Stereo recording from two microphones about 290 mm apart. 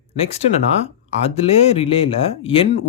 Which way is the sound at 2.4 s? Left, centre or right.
Centre.